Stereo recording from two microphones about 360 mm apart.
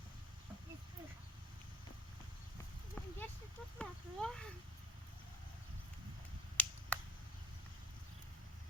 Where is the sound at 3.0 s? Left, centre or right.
Centre.